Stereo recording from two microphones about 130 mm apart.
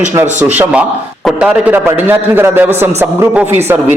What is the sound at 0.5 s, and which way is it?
A man's voice, 10° right (ahead or behind).